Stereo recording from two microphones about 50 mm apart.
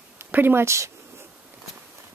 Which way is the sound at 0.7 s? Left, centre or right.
Right.